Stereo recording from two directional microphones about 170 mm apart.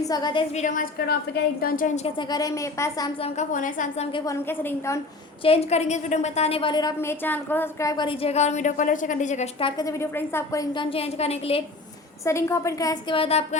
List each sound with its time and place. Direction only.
0.0 s a woman's voice: 25° left (ahead or behind)
0.5 s a woman's voice: 50° left (ahead or behind)
2.1 s a woman's voice: 20° left (ahead or behind)
3.3 s a woman's voice: 50° left (ahead or behind)
4.3 s a woman's voice: 15° left (ahead or behind)
5.4 s a woman's voice: 35° left (ahead or behind); by 10.8 s 20° left (ahead or behind)
10.8 s a woman's voice: 35° left (ahead or behind)
12.2 s a woman's voice: 15° left (ahead or behind); by 13.6 s 35° left (ahead or behind)